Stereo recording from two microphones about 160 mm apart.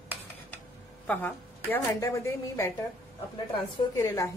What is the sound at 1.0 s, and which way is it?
Speech, 10° left (ahead or behind).